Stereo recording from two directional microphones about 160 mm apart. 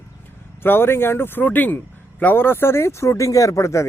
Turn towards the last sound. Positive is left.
turn(degrees=20)  # may be behind; listen again after turning